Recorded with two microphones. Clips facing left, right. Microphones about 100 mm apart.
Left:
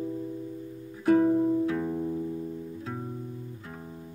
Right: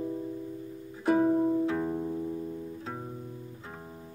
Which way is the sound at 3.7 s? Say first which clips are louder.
Left 2 dB; 15° right (ahead or behind).